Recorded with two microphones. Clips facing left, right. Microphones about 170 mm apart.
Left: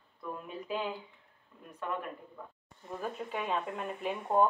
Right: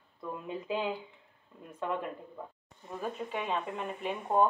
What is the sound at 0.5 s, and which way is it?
Speech, 20° right (ahead or behind).